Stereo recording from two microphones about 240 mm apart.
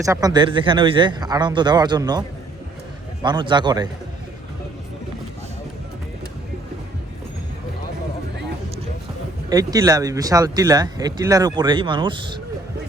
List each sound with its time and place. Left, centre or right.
0.0 s speech: centre
3.2 s a man's voice: centre
9.5 s speech: centre